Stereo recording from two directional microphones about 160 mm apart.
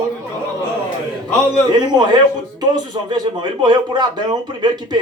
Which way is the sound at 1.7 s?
25° right (ahead or behind).